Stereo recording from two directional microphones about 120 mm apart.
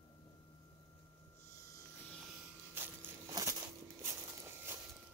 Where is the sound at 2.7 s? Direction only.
20° right (ahead or behind).